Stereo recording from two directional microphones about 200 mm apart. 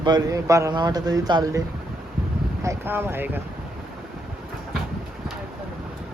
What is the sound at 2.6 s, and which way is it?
Speech, 10° right (ahead or behind).